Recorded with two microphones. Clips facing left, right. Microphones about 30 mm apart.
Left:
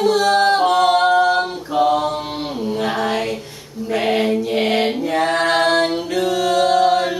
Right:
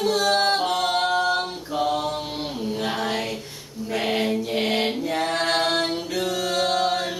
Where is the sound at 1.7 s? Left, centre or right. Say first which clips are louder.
Left 7 dB; centre.